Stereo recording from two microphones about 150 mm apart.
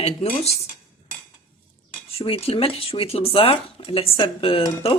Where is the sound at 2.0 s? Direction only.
40° left (ahead or behind).